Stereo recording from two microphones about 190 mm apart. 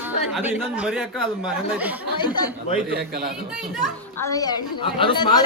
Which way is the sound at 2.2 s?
20° left (ahead or behind).